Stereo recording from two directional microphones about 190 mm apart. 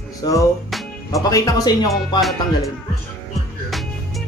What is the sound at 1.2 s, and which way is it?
Speech, 20° left (ahead or behind).